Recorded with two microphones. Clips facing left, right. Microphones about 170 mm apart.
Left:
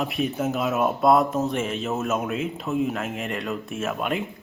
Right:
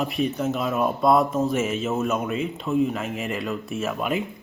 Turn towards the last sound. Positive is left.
turn(degrees=0)  # may be behind; listen again after turning